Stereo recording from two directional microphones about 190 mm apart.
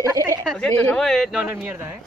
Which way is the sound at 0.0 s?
15° right (ahead or behind).